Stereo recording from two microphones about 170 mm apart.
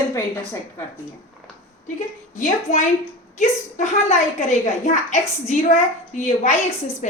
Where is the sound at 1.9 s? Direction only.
50° left (ahead or behind).